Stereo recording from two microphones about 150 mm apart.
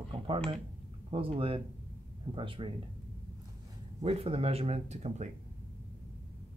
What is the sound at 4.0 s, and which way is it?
Speech, 40° right (ahead or behind).